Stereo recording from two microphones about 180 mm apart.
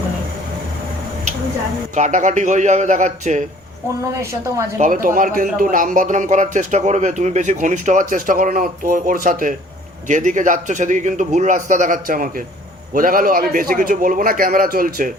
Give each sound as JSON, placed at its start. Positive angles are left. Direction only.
{"t": 2.0, "sound": "speech", "side_deg": -45}
{"t": 4.2, "sound": "a woman's voice", "side_deg": -15}
{"t": 4.8, "sound": "speech", "side_deg": -50}